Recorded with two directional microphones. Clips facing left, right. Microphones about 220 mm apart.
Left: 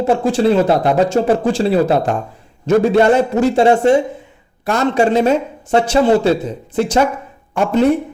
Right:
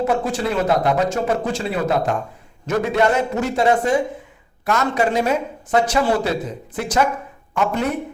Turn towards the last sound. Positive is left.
turn(degrees=30)  # may be behind; listen again after turning